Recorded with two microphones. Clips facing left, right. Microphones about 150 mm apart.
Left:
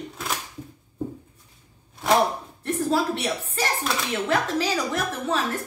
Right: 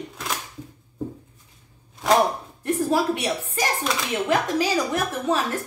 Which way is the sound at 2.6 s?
10° right (ahead or behind).